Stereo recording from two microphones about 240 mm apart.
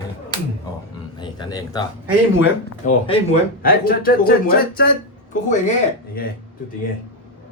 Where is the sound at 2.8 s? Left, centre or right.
Left.